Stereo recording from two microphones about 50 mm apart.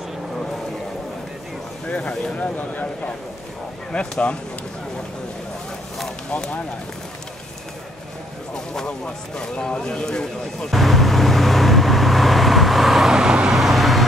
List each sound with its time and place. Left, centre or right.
2.3 s speech: left
3.9 s speech: centre
8.7 s a sound: centre
13.5 s vehicle: centre